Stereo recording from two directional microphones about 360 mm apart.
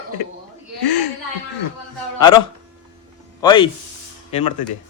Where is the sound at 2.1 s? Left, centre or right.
Centre.